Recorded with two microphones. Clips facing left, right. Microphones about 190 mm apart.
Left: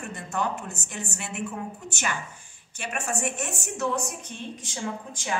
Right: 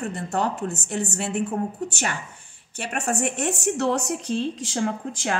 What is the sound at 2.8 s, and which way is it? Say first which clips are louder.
A woman's voice: right 5 dB; 60° right (ahead or behind).